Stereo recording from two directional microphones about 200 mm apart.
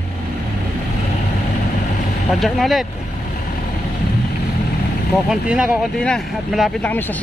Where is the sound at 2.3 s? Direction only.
Centre (ahead or behind).